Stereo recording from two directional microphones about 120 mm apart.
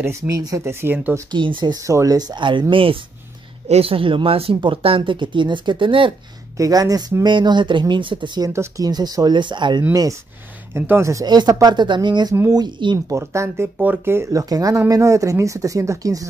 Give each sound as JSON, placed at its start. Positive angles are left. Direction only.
{"t": 0.3, "sound": "speech", "side_deg": -30}
{"t": 1.3, "sound": "speech", "side_deg": -40}
{"t": 6.5, "sound": "speech", "side_deg": -30}
{"t": 8.5, "sound": "speech", "side_deg": -30}
{"t": 10.7, "sound": "speech", "side_deg": -20}
{"t": 13.1, "sound": "speech", "side_deg": -25}